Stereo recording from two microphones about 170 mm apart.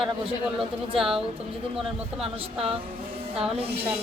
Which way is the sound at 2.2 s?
35° right (ahead or behind).